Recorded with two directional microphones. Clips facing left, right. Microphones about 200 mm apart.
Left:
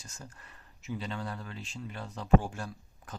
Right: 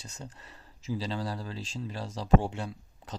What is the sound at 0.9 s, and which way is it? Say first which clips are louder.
Speech: right 4 dB; 35° right (ahead or behind).